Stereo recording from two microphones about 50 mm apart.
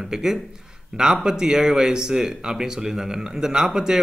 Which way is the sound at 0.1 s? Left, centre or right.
Centre.